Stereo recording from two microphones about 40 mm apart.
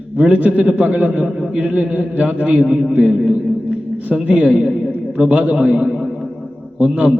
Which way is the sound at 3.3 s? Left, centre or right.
Right.